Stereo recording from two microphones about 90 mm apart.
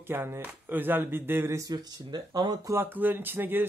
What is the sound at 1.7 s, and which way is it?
Speech, 55° right (ahead or behind).